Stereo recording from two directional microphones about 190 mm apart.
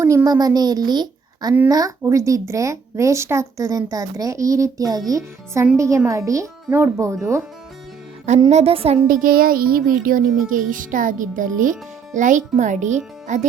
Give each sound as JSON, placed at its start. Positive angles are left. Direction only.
{"t": 0.0, "sound": "a child's voice", "side_deg": -15}
{"t": 8.4, "sound": "a woman's voice", "side_deg": -35}
{"t": 9.0, "sound": "a child's voice", "side_deg": -45}